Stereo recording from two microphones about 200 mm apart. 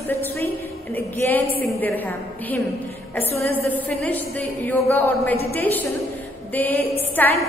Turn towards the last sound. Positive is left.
turn(degrees=10)  # may be behind; listen again after turning